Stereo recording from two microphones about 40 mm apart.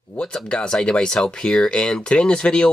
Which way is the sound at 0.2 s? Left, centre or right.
Left.